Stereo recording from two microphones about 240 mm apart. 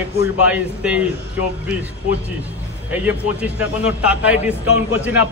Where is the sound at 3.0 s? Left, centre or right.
Centre.